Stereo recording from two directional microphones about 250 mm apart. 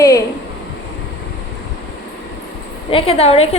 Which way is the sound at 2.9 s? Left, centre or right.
Left.